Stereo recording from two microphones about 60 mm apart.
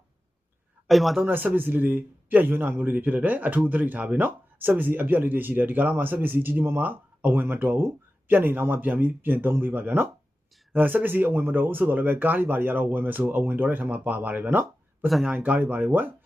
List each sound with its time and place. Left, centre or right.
0.9 s speech: centre
1.3 s speech: right
15.0 s speech: centre
15.3 s speech: right